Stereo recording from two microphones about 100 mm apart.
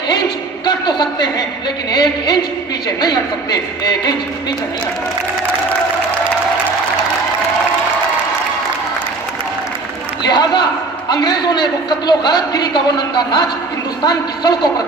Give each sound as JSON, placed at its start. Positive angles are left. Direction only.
{"t": 0.7, "sound": "a sound", "side_deg": 45}
{"t": 1.9, "sound": "a woman's voice", "side_deg": 45}
{"t": 10.2, "sound": "a man's voice", "side_deg": 45}